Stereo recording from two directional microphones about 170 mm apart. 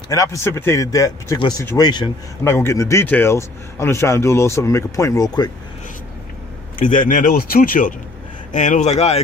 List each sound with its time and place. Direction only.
0.1 s speech: 20° left (ahead or behind)
7.1 s speech: 55° left (ahead or behind); by 9.2 s 40° left (ahead or behind)